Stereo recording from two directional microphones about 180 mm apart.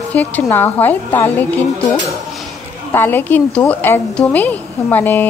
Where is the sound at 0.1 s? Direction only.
10° left (ahead or behind).